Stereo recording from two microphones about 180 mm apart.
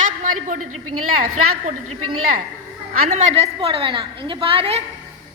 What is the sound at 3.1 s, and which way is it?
A woman's voice, 40° right (ahead or behind).